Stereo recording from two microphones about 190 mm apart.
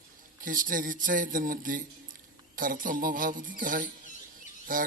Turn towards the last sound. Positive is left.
turn(degrees=-45)  # may be behind; listen again after turning